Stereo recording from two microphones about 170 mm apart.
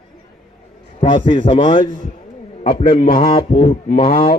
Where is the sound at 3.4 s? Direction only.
40° left (ahead or behind).